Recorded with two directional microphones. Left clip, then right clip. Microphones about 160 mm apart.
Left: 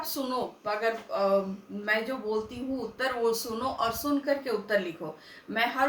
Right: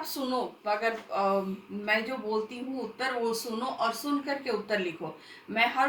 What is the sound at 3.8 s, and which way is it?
Speech, 20° left (ahead or behind).